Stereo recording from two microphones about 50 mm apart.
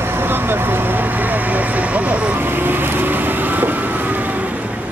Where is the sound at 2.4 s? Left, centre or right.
Right.